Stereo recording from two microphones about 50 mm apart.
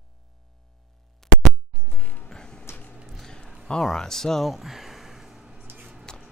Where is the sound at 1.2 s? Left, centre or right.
Centre.